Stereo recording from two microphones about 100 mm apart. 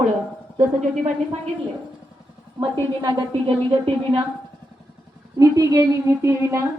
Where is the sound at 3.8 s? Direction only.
65° right (ahead or behind).